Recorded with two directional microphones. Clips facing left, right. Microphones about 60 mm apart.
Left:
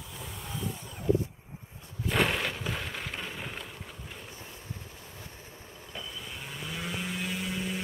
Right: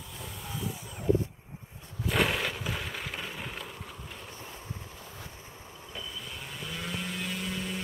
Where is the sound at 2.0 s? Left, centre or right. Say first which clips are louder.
Even; centre.